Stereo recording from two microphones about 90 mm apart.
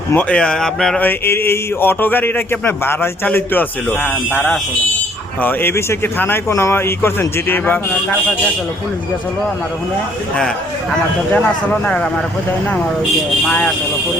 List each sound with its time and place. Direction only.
0.1 s speech: 15° left (ahead or behind)
0.9 s a sound: 20° left (ahead or behind)
4.0 s speech: 10° left (ahead or behind)
5.4 s a sound: 20° left (ahead or behind)
11.3 s speech: 15° left (ahead or behind)
13.5 s speech: 10° left (ahead or behind)